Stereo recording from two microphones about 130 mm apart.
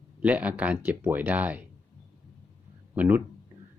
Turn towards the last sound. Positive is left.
turn(degrees=-10)  # may be behind; listen again after turning